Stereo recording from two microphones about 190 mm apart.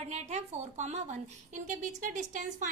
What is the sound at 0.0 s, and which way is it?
A woman's voice, 35° right (ahead or behind).